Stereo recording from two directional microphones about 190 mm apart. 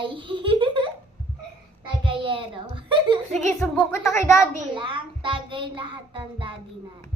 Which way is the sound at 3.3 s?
40° right (ahead or behind).